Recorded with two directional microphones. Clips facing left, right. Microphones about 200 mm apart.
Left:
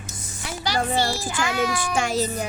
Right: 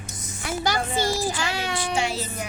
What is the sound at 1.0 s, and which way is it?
Child singing, 35° right (ahead or behind).